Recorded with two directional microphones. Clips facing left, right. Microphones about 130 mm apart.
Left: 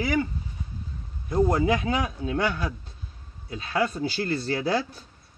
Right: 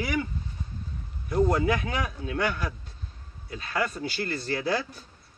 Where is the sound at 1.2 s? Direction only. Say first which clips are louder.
Left 2 dB; 30° left (ahead or behind).